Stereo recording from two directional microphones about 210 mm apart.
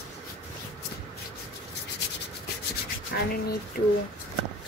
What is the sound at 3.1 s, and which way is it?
Speech, 50° left (ahead or behind).